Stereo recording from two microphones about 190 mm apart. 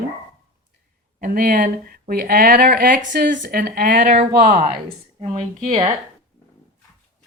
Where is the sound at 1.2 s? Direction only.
45° right (ahead or behind).